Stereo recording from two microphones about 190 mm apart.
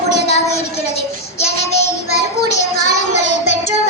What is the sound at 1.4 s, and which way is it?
Child singing, 35° left (ahead or behind).